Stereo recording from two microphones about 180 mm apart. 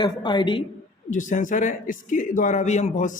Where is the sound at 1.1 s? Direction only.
45° left (ahead or behind).